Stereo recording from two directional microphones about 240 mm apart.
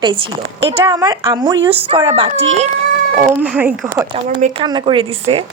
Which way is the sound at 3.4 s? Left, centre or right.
Centre.